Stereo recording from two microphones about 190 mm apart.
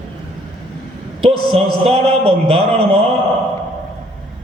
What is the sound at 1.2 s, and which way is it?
A man's voice, 30° right (ahead or behind).